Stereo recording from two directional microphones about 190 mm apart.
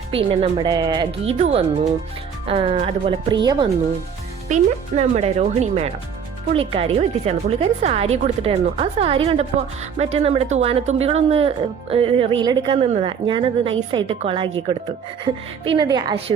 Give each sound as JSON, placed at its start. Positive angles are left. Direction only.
{"t": 0.1, "sound": "speech", "side_deg": -30}
{"t": 4.4, "sound": "speech", "side_deg": -35}